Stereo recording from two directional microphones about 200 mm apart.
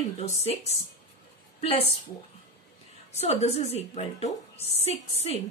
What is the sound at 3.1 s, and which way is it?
A woman's voice, 35° left (ahead or behind).